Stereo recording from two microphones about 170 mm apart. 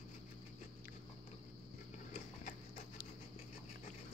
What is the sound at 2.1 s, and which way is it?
Horse, 55° left (ahead or behind).